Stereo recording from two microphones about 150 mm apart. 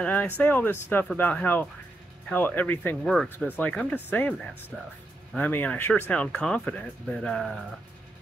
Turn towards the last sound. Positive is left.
turn(degrees=5)  # may be behind; listen again after turning